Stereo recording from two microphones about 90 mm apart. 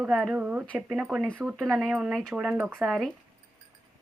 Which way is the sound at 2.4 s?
15° right (ahead or behind).